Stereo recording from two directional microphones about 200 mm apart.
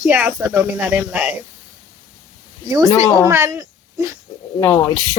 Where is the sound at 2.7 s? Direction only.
15° right (ahead or behind).